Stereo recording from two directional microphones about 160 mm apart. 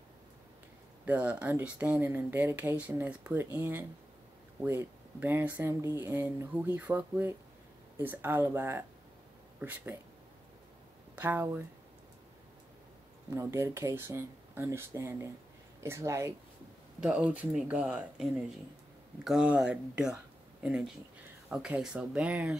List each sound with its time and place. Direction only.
1.0 s speech: 10° right (ahead or behind)
11.1 s speech: 10° right (ahead or behind)
13.3 s speech: 15° right (ahead or behind)